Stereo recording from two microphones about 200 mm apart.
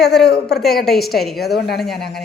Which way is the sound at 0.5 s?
Centre (ahead or behind).